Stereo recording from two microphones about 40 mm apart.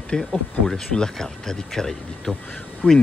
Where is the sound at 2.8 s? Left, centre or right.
Centre.